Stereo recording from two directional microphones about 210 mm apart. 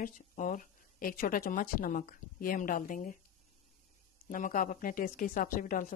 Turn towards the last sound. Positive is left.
turn(degrees=40)  # may be behind; listen again after turning